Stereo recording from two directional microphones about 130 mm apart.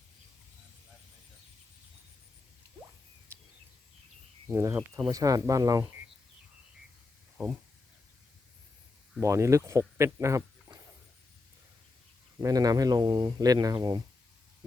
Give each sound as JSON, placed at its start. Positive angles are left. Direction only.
{"t": 3.3, "sound": "a sound", "side_deg": -20}
{"t": 4.4, "sound": "speech", "side_deg": -25}
{"t": 4.9, "sound": "speech", "side_deg": -30}
{"t": 7.3, "sound": "speech", "side_deg": -5}
{"t": 9.2, "sound": "speech", "side_deg": -20}
{"t": 12.4, "sound": "speech", "side_deg": -25}